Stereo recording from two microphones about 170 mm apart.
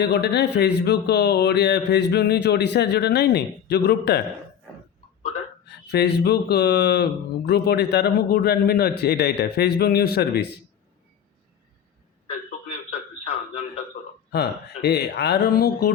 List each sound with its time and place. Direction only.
0.0 s speech: 75° left (ahead or behind)
5.6 s speech: 75° left (ahead or behind)
12.5 s a sound: 40° left (ahead or behind)
14.3 s speech: 70° left (ahead or behind)